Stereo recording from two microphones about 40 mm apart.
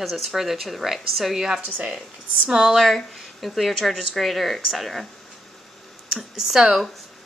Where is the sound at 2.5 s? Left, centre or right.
Centre.